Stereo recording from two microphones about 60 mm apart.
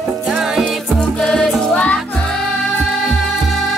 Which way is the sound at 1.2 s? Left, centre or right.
Centre.